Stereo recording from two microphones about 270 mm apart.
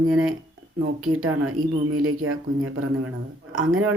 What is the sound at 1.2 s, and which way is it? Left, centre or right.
Speech, right.